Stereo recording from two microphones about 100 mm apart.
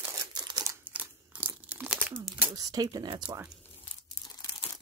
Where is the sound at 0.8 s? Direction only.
15° right (ahead or behind).